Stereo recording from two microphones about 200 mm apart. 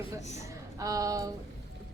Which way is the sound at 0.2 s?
35° left (ahead or behind).